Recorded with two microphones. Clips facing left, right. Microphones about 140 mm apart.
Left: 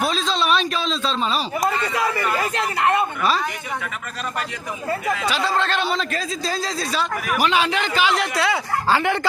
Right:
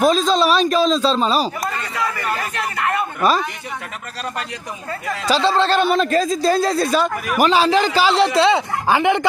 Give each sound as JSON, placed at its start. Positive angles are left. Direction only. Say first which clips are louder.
{"t": 0.0, "sound": "speech", "louder": "right 7 dB", "side_deg": -45}
{"t": 2.4, "sound": "speech", "louder": "left 2 dB", "side_deg": 20}
{"t": 3.2, "sound": "speech", "louder": "right 4 dB", "side_deg": -45}
{"t": 5.1, "sound": "speech", "louder": "right 9 dB", "side_deg": -30}
{"t": 5.8, "sound": "speech", "louder": "right 8 dB", "side_deg": -50}
{"t": 7.3, "sound": "speech", "louder": "right 6 dB", "side_deg": -40}